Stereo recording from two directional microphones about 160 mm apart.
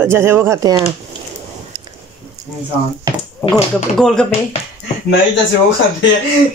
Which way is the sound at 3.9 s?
5° left (ahead or behind).